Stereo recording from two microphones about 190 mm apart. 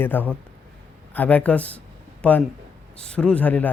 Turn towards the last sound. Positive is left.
turn(degrees=10)  # may be behind; listen again after turning